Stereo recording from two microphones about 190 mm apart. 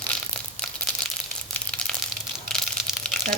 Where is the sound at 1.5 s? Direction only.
5° left (ahead or behind).